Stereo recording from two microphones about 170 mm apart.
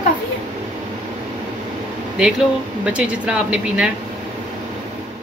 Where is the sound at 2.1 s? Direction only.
5° right (ahead or behind).